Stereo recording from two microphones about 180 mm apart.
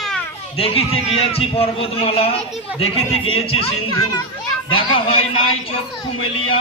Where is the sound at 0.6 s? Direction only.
35° left (ahead or behind).